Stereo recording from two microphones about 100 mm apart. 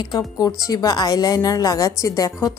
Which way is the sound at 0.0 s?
40° left (ahead or behind).